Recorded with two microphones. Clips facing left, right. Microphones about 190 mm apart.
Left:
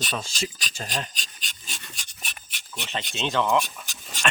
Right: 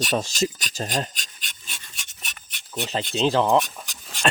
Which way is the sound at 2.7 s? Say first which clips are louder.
Right 7 dB; 35° right (ahead or behind).